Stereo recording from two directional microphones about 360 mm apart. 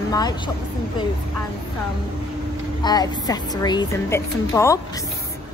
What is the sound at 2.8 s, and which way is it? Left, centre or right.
A woman's voice, centre.